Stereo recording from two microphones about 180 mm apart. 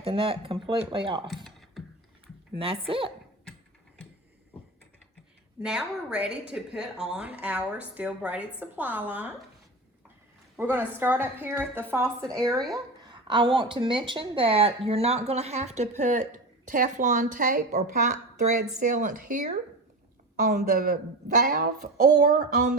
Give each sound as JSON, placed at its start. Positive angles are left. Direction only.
{"t": 0.0, "sound": "speech", "side_deg": -30}
{"t": 2.6, "sound": "a woman's voice", "side_deg": -30}
{"t": 5.6, "sound": "a woman's voice", "side_deg": -5}
{"t": 10.6, "sound": "a woman's voice", "side_deg": -10}
{"t": 20.5, "sound": "speech", "side_deg": -50}